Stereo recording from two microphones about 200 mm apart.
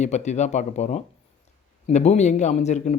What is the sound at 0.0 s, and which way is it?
Speech, 35° left (ahead or behind).